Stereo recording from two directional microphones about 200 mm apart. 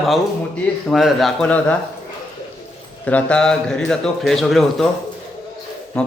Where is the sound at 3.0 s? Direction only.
5° left (ahead or behind).